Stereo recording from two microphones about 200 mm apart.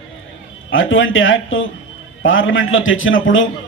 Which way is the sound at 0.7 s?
80° left.